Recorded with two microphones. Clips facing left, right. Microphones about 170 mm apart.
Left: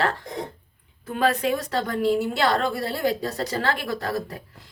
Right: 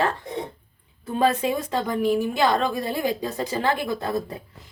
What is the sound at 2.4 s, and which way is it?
Speech, 15° right (ahead or behind).